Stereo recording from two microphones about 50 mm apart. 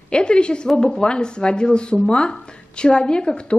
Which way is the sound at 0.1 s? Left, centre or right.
Centre.